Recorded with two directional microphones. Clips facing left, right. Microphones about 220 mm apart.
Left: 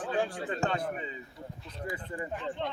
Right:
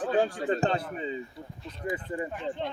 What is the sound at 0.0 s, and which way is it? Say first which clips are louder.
Speech: right 5 dB; 40° right (ahead or behind).